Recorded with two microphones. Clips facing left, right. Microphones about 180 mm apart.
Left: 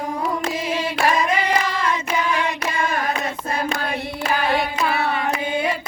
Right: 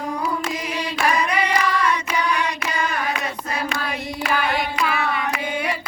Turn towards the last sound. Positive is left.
turn(degrees=35)  # may be behind; listen again after turning